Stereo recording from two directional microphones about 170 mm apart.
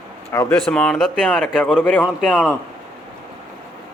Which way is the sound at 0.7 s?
5° left (ahead or behind).